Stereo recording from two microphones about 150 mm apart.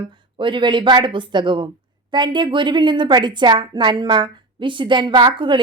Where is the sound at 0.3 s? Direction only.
35° right (ahead or behind).